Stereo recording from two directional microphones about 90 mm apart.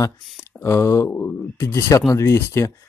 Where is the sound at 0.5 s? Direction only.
25° left (ahead or behind).